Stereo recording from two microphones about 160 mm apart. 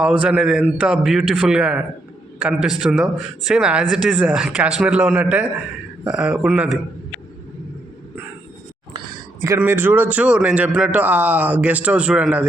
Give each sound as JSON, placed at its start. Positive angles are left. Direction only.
{"t": 0.0, "sound": "a man's voice", "side_deg": -5}
{"t": 8.9, "sound": "a sound", "side_deg": -25}
{"t": 9.6, "sound": "a man's voice", "side_deg": -15}